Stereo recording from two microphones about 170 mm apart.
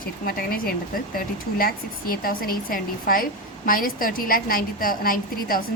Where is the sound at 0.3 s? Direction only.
60° left (ahead or behind).